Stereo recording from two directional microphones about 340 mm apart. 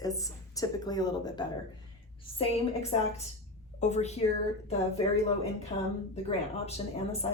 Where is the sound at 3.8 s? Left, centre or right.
Centre.